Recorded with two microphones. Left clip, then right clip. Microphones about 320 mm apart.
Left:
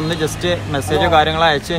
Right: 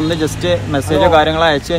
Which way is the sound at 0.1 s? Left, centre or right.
Centre.